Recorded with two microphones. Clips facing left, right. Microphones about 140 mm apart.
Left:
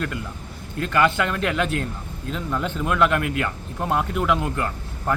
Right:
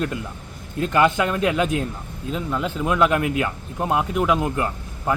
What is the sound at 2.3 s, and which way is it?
Speech, 5° right (ahead or behind).